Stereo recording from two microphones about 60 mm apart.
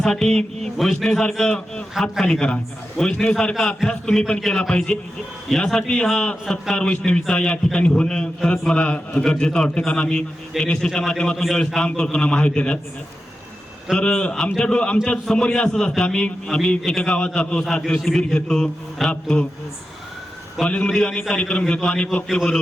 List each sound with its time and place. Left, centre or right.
0.0 s a man's voice: centre
13.9 s a man's voice: centre
20.7 s a man's voice: centre
20.9 s a man's voice: centre